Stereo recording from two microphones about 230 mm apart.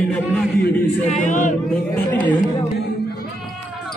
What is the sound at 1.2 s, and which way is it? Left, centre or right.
Speech, left.